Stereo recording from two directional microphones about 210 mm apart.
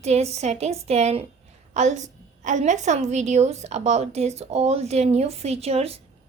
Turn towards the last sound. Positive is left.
turn(degrees=-30)  # may be behind; listen again after turning